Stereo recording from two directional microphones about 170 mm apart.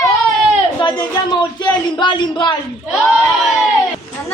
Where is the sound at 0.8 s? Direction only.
25° left (ahead or behind).